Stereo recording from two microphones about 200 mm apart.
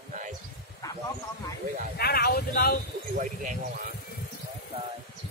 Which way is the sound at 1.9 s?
50° left (ahead or behind).